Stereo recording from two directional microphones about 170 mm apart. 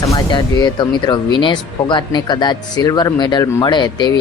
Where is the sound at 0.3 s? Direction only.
25° left (ahead or behind).